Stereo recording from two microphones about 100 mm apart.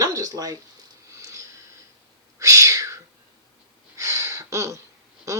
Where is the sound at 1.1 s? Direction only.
30° right (ahead or behind).